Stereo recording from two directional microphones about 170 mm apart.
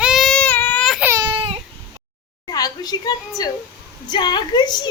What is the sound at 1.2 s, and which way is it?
Baby cry, 30° right (ahead or behind).